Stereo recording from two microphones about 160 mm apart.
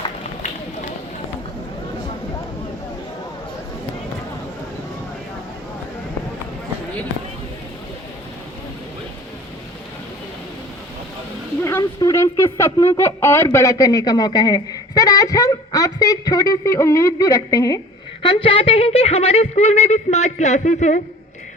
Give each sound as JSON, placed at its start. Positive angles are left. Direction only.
{"t": 11.6, "sound": "speech", "side_deg": 20}
{"t": 18.2, "sound": "speech", "side_deg": 30}